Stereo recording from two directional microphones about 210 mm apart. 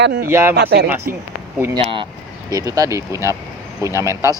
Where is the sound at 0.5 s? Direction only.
50° right (ahead or behind).